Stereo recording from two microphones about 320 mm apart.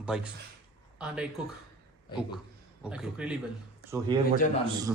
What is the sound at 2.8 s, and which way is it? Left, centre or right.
Speech, centre.